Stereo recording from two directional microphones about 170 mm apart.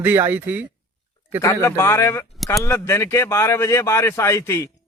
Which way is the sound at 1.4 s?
20° left (ahead or behind).